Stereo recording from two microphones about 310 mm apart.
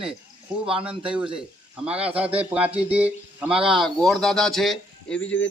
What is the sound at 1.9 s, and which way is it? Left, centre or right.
A man's voice, centre.